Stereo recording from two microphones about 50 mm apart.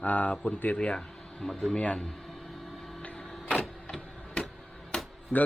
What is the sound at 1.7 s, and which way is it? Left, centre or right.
Speech, left.